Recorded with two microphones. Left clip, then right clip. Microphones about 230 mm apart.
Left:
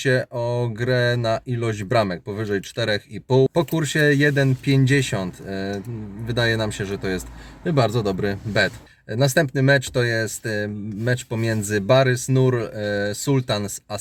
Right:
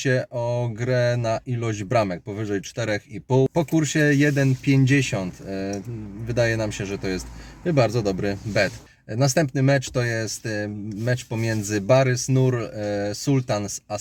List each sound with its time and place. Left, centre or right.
0.0 s a man's voice: left